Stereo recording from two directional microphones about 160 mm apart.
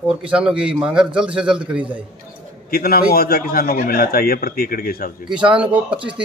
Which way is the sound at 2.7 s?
65° left (ahead or behind).